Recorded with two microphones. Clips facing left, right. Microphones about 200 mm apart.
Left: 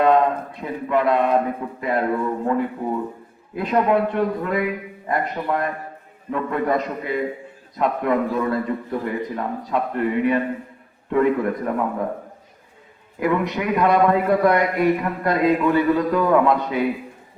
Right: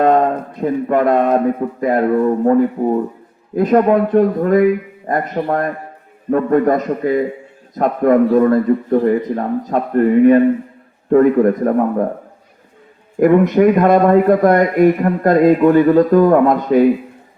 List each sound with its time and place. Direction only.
0.0 s a sound: 45° right (ahead or behind)
1.8 s a man's voice: 45° right (ahead or behind)
13.1 s a man's voice: 50° right (ahead or behind)